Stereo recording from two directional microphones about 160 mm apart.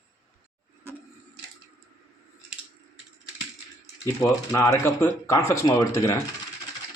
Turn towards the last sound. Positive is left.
turn(degrees=20)  # may be behind; listen again after turning